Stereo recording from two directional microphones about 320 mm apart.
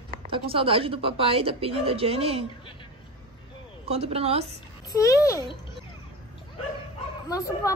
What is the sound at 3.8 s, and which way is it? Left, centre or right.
Speech, centre.